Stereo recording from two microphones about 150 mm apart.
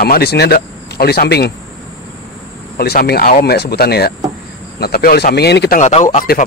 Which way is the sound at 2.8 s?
90° left.